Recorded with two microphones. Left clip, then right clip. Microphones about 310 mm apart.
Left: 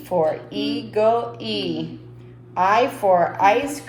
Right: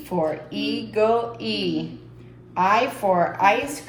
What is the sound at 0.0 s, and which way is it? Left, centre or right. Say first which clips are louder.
A woman's voice: left 4 dB; left.